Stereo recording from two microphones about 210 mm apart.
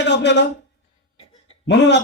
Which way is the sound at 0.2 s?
55° left (ahead or behind).